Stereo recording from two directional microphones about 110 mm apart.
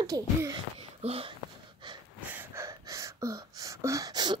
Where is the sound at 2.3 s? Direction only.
25° right (ahead or behind).